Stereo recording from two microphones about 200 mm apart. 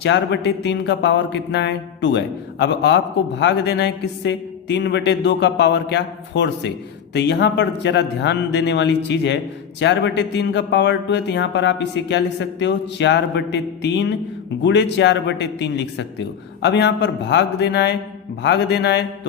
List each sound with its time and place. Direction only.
0.0 s speech: 60° left (ahead or behind)